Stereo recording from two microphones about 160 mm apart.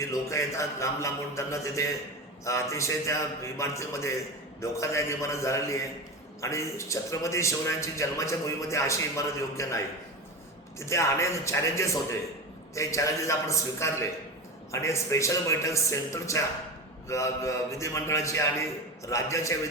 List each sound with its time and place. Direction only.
0.0 s a man's voice: 20° left (ahead or behind)